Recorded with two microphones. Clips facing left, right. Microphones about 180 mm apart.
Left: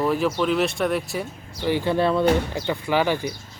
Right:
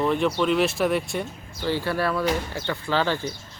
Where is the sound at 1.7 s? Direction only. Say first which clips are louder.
Left 4 dB; 20° left (ahead or behind).